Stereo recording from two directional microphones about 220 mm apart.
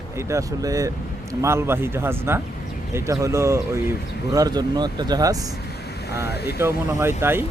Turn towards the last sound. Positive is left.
turn(degrees=-10)  # may be behind; listen again after turning